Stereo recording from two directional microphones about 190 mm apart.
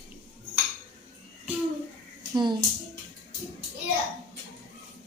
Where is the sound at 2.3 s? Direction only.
25° right (ahead or behind).